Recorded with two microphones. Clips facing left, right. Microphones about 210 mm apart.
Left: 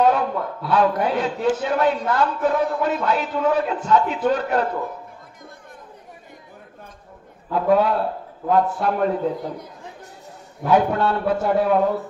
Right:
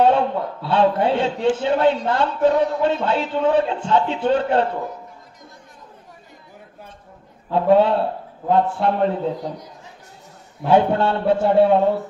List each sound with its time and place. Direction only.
0.0 s a man's voice: 30° right (ahead or behind)
7.5 s a man's voice: 25° right (ahead or behind)
10.6 s a man's voice: 30° right (ahead or behind)